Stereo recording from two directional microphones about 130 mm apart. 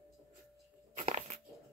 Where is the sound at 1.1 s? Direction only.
60° right (ahead or behind).